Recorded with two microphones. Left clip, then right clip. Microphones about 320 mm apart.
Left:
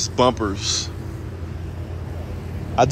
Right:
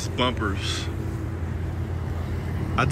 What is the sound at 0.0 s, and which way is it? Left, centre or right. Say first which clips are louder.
Speech: left 7 dB; centre.